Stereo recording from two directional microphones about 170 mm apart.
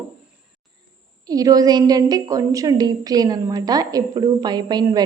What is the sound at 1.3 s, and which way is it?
A woman's voice, 20° right (ahead or behind).